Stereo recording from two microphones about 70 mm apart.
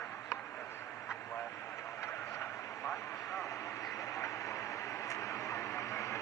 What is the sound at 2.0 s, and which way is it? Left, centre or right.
Vehicle, left.